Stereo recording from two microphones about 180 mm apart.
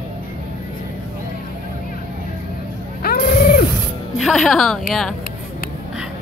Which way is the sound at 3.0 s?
55° left (ahead or behind).